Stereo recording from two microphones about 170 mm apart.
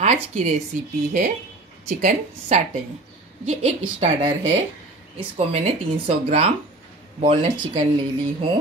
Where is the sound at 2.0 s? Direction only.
45° right (ahead or behind).